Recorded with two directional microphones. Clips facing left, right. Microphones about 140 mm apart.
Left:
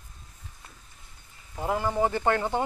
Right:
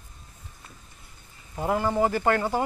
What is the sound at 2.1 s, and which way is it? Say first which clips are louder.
Speech: right 2 dB; 20° left (ahead or behind).